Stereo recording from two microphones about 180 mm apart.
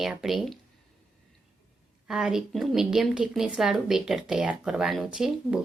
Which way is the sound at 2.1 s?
5° right (ahead or behind).